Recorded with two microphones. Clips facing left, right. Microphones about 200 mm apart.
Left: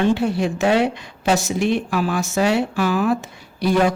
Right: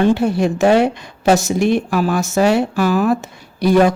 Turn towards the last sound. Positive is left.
turn(degrees=-40)  # may be behind; listen again after turning